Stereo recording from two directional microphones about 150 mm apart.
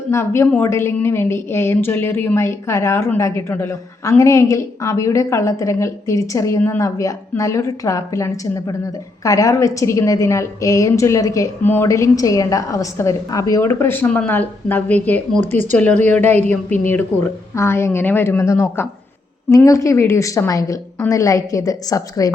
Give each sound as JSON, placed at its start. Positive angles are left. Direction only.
{"t": 0.1, "sound": "a woman's voice", "side_deg": 15}
{"t": 15.4, "sound": "speech", "side_deg": -50}
{"t": 15.7, "sound": "a woman's voice", "side_deg": 10}